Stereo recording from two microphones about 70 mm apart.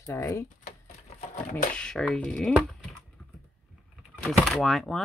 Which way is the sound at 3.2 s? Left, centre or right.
Left.